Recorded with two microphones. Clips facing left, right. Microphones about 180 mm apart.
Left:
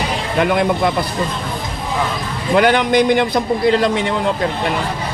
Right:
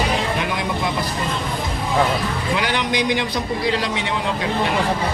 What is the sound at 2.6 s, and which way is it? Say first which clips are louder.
Speech: left 11 dB; 55° left (ahead or behind).